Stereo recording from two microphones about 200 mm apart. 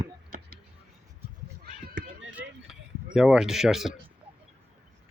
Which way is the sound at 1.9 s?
65° right (ahead or behind).